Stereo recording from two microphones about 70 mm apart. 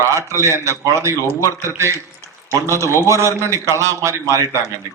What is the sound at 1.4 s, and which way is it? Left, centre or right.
Speech, left.